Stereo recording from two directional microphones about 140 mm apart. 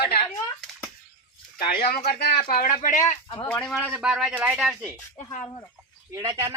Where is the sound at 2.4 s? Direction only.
80° left.